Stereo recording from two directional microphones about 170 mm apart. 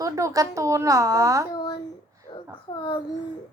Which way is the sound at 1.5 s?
30° left (ahead or behind).